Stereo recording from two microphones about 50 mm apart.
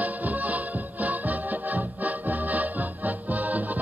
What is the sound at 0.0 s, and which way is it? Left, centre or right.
Music, right.